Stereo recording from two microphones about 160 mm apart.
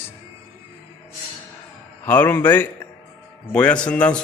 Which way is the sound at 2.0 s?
10° left (ahead or behind).